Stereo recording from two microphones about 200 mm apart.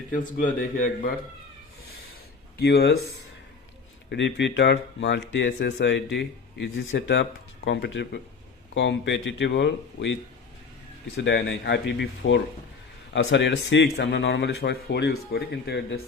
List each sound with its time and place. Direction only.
0.1 s a man's voice: 40° left (ahead or behind)
2.6 s speech: 55° left (ahead or behind)
4.1 s speech: 60° left (ahead or behind)
11.2 s speech: 60° left (ahead or behind)